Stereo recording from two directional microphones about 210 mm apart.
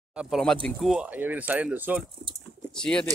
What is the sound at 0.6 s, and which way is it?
Speech, centre (ahead or behind).